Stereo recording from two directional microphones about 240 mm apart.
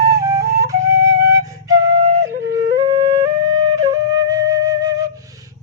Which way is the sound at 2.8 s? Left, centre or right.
Right.